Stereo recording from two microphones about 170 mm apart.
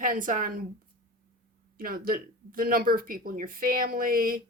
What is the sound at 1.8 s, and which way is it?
Speech, 60° right (ahead or behind).